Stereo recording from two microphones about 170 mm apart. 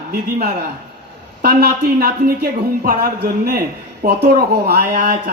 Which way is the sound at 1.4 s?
65° right (ahead or behind).